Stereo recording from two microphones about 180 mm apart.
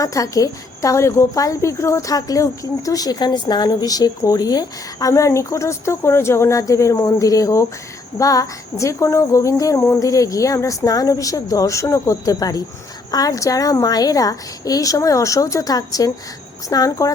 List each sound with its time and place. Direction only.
0.0 s a woman's voice: 20° left (ahead or behind)
8.2 s cricket: 20° left (ahead or behind)
9.9 s a woman's voice: 20° left (ahead or behind)